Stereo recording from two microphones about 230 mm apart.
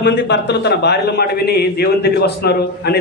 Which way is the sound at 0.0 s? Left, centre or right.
Left.